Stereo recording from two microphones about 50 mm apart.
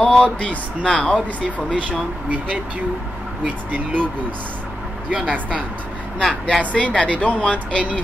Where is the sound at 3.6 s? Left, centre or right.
Right.